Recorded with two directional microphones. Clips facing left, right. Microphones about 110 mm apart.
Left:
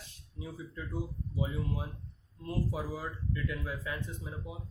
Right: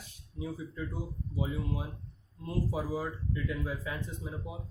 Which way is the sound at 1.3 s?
20° right (ahead or behind).